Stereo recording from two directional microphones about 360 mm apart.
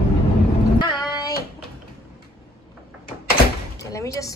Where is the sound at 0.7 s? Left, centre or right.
Centre.